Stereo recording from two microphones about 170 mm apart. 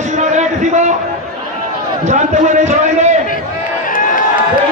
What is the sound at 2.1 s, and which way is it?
A man's voice, 45° right (ahead or behind).